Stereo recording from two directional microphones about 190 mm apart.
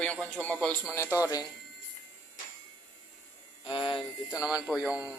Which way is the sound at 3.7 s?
25° left (ahead or behind).